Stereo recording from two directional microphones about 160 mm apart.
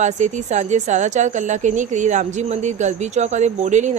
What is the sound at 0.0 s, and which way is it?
Speech, 50° right (ahead or behind).